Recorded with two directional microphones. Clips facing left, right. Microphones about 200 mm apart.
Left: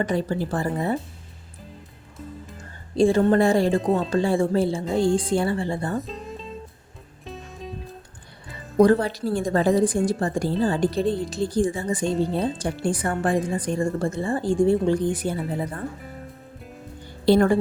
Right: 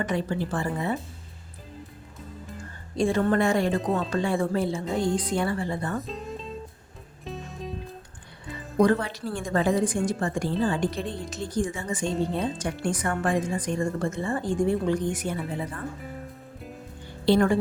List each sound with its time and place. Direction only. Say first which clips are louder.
0.0 s a woman's voice: left 3 dB; 35° left (ahead or behind)
2.9 s a woman's voice: left 5 dB; 30° left (ahead or behind)
3.8 s speech: left 4 dB; centre (ahead or behind)
4.1 s a woman's voice: left 5 dB; 30° left (ahead or behind)
6.0 s music: left 1 dB; centre (ahead or behind)
8.8 s a woman's voice: left 5 dB; 35° left (ahead or behind)
12.0 s speech: left 3 dB; centre (ahead or behind)
12.3 s a woman's voice: left 3 dB; 35° left (ahead or behind)
17.2 s a woman's voice: left 3 dB; 40° left (ahead or behind)